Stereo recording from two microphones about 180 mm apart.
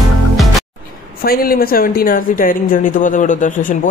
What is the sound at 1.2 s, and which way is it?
Speech, 55° left (ahead or behind).